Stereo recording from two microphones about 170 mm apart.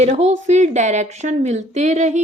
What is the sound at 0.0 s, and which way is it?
A woman's voice, 40° right (ahead or behind).